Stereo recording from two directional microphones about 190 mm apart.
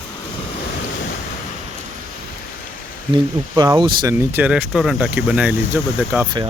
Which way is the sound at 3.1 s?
20° right (ahead or behind).